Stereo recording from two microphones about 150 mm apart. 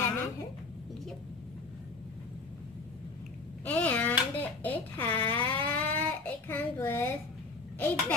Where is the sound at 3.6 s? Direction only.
10° left (ahead or behind).